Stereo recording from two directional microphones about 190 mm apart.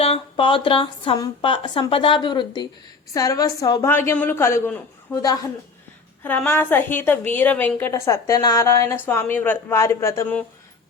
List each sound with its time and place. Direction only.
0.0 s a woman's voice: 30° left (ahead or behind); by 10.4 s 10° left (ahead or behind)